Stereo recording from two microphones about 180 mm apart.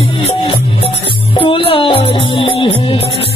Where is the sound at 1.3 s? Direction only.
30° left (ahead or behind).